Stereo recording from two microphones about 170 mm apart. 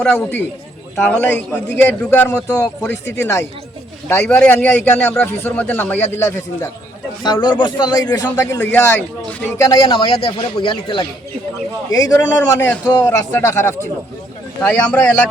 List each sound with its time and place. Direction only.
0.0 s a man's voice: 10° left (ahead or behind); by 8.0 s 25° left (ahead or behind)
8.4 s a man's voice: 15° left (ahead or behind)
9.8 s speech: 25° left (ahead or behind)
11.9 s a man's voice: 20° left (ahead or behind)